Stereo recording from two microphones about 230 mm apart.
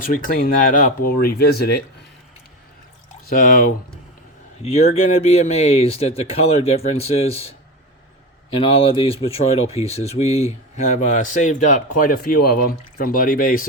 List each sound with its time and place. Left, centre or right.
0.0 s speech: left
3.2 s speech: left